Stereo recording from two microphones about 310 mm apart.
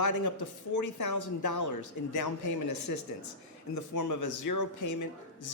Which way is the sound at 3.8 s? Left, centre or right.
Left.